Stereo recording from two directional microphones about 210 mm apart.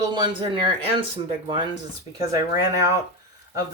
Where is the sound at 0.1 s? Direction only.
25° right (ahead or behind).